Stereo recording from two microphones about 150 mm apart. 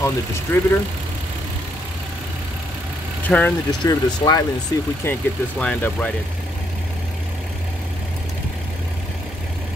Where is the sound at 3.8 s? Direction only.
25° left (ahead or behind); by 6.1 s 10° left (ahead or behind).